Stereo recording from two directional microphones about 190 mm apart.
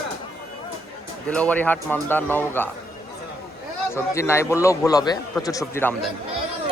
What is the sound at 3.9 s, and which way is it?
A man's voice, 15° left (ahead or behind).